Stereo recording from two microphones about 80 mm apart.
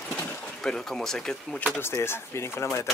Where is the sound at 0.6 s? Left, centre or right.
Centre.